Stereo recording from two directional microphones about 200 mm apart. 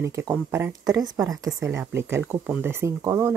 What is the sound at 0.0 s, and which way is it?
Speech, 15° right (ahead or behind).